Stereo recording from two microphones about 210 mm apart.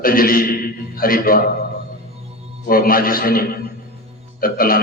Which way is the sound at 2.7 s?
45° left (ahead or behind).